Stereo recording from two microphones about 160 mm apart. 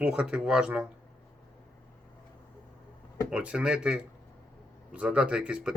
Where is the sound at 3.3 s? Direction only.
5° right (ahead or behind).